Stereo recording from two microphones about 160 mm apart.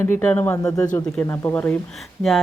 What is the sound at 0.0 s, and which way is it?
Speech, 10° left (ahead or behind).